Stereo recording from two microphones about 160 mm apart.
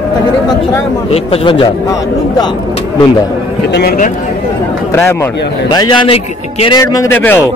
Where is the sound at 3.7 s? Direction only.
90° left.